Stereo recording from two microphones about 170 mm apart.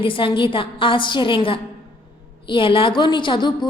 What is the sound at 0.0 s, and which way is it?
A woman's voice, 30° left (ahead or behind).